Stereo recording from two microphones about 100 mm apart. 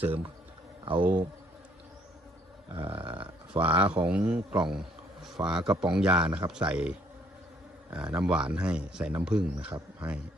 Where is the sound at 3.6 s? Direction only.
15° right (ahead or behind).